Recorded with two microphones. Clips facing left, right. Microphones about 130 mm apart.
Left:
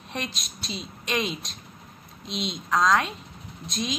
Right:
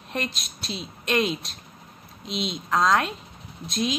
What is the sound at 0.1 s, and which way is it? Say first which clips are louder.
A woman's voice: right 3 dB; centre (ahead or behind).